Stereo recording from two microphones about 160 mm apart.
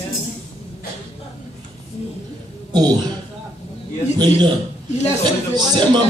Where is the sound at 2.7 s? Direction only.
25° right (ahead or behind).